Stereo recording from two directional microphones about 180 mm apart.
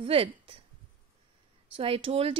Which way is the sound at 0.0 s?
30° right (ahead or behind).